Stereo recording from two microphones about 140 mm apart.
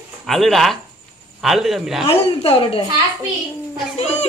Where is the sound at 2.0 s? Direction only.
45° left (ahead or behind).